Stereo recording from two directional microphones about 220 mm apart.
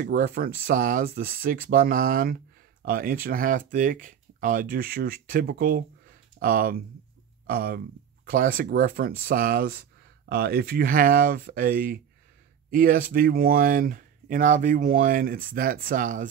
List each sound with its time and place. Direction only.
0.0 s speech: 40° right (ahead or behind)